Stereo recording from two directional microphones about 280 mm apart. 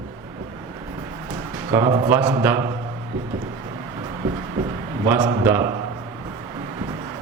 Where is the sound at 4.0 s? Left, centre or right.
Centre.